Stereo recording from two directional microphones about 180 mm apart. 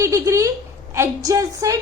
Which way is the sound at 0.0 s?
15° right (ahead or behind).